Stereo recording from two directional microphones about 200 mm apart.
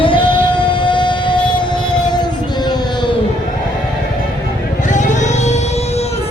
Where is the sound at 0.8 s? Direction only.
25° left (ahead or behind).